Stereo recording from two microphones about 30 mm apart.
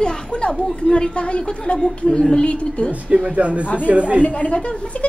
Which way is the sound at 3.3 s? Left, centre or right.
Right.